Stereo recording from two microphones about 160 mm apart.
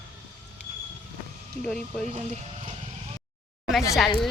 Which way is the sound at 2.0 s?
45° right (ahead or behind).